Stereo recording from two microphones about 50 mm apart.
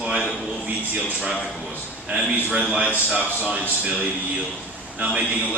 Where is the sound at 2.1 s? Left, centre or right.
Right.